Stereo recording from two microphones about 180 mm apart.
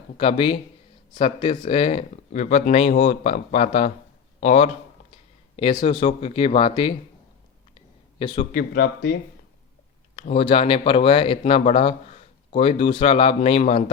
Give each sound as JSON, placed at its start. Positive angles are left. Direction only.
{"t": 0.2, "sound": "a man's voice", "side_deg": 30}
{"t": 8.5, "sound": "speech", "side_deg": 60}
{"t": 10.2, "sound": "speech", "side_deg": 35}